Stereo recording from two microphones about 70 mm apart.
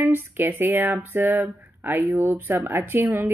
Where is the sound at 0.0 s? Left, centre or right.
Right.